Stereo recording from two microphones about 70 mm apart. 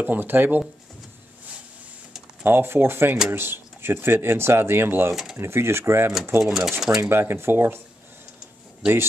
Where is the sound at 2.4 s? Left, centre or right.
Right.